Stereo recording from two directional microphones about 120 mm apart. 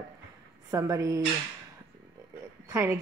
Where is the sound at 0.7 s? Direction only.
25° right (ahead or behind).